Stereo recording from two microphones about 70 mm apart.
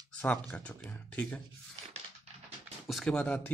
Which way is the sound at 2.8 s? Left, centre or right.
Centre.